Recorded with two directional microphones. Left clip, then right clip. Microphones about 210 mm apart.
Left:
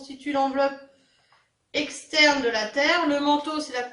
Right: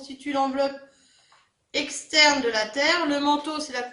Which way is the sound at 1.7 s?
50° right (ahead or behind).